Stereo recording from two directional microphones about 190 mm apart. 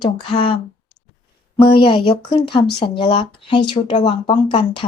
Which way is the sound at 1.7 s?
25° left (ahead or behind).